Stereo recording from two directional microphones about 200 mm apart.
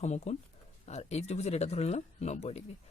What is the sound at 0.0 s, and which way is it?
Speech, 35° left (ahead or behind).